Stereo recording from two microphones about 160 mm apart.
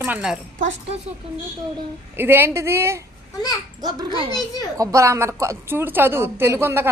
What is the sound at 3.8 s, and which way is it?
A child's voice, 30° right (ahead or behind).